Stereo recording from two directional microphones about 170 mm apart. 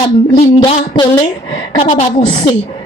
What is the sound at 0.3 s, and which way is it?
Speech, 35° left (ahead or behind).